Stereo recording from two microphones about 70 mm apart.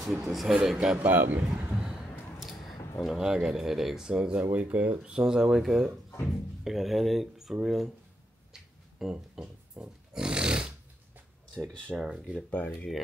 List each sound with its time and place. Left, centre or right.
0.0 s a man's voice: centre
0.9 s speech: right
1.7 s a sound: centre
3.0 s a man's voice: centre
9.1 s a sound: centre
11.5 s speech: centre
12.0 s speech: centre
12.4 s speech: centre